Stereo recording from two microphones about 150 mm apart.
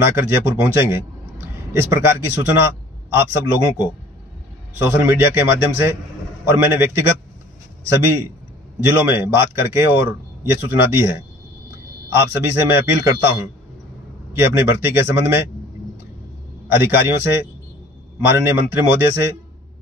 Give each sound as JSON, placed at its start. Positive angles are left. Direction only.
{"t": 0.0, "sound": "a man's voice", "side_deg": -15}
{"t": 14.4, "sound": "a man's voice", "side_deg": -15}
{"t": 16.6, "sound": "a man's voice", "side_deg": -15}